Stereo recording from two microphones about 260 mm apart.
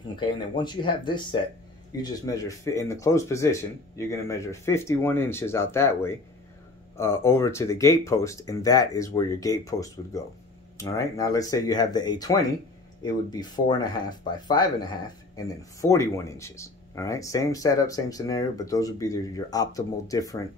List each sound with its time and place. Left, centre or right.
0.1 s speech: centre